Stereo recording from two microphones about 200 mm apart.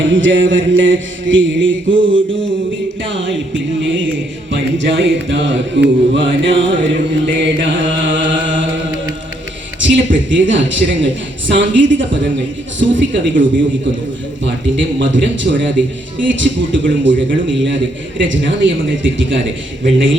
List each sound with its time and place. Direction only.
0.0 s mantra: 70° right (ahead or behind)
11.5 s a man's voice: 65° right (ahead or behind)
13.0 s mantra: 65° right (ahead or behind)
14.4 s a man's voice: 65° right (ahead or behind)
18.2 s mantra: 65° right (ahead or behind)